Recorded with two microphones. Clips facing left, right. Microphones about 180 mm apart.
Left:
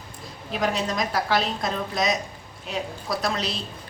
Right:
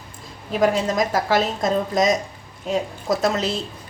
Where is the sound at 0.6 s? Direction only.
45° right (ahead or behind).